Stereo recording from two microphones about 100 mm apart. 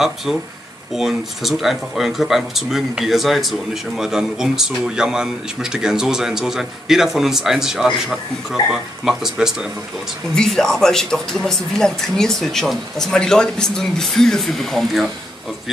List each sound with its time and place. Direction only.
0.0 s speech: centre (ahead or behind)